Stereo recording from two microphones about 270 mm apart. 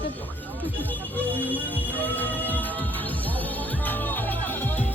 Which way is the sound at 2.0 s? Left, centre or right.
Centre.